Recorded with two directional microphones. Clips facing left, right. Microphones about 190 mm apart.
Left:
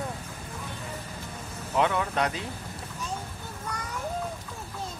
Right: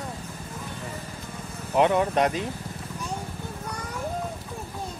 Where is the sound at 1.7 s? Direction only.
20° right (ahead or behind).